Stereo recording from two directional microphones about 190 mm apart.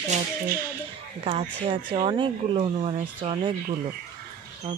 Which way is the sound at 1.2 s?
30° right (ahead or behind).